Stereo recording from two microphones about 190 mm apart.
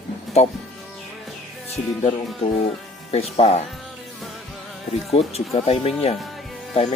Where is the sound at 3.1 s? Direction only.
30° left (ahead or behind).